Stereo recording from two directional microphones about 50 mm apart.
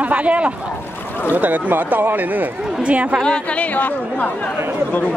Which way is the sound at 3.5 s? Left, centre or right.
Left.